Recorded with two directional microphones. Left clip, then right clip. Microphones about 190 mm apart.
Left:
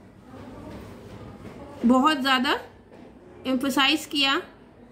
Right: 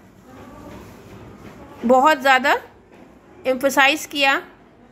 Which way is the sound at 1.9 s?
30° right (ahead or behind).